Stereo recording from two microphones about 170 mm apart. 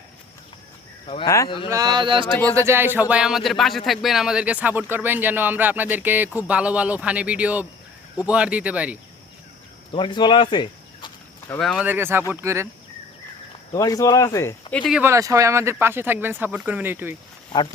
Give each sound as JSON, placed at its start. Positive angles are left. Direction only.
{"t": 1.0, "sound": "speech", "side_deg": 30}
{"t": 1.7, "sound": "speech", "side_deg": -25}
{"t": 2.6, "sound": "speech", "side_deg": -15}
{"t": 9.9, "sound": "speech", "side_deg": 30}
{"t": 11.8, "sound": "speech", "side_deg": -10}
{"t": 13.7, "sound": "speech", "side_deg": 20}
{"t": 14.7, "sound": "speech", "side_deg": 10}
{"t": 14.9, "sound": "speech", "side_deg": -15}